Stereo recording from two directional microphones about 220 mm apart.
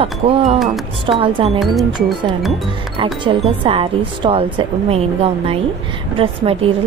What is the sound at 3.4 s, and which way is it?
Speech, 25° right (ahead or behind).